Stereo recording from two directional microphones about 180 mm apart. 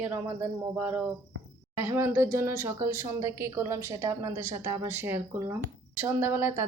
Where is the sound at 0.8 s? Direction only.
10° right (ahead or behind).